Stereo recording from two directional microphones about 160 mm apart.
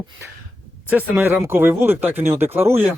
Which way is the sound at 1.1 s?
15° right (ahead or behind).